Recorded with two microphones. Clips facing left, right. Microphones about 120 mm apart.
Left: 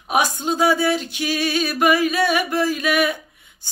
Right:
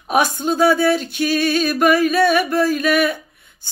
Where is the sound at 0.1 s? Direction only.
15° left (ahead or behind).